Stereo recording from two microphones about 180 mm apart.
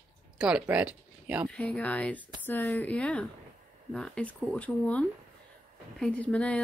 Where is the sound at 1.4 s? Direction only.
5° left (ahead or behind).